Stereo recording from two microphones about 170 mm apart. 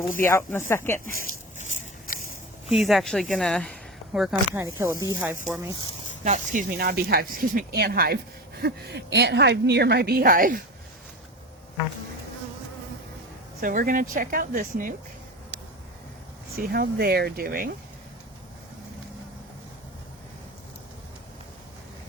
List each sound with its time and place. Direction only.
0.2 s speech: 15° left (ahead or behind)
1.3 s a sound: 50° left (ahead or behind)
2.6 s speech: centre (ahead or behind)
4.5 s speech: 15° right (ahead or behind)
6.2 s speech: 45° right (ahead or behind)
6.7 s speech: 65° right (ahead or behind)
8.6 s a woman's voice: 90° right; by 10.6 s 55° right (ahead or behind)
13.6 s speech: 55° right (ahead or behind)
16.6 s speech: 60° right (ahead or behind)